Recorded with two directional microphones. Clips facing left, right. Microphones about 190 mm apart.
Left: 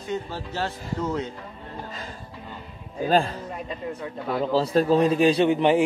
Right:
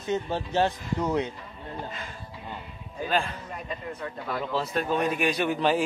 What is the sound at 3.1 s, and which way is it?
A man's voice, 35° left (ahead or behind).